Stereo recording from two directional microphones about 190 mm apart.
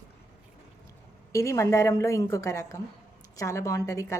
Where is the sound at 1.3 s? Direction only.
15° left (ahead or behind).